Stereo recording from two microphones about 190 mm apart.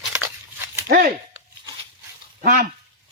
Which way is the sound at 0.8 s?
50° right (ahead or behind).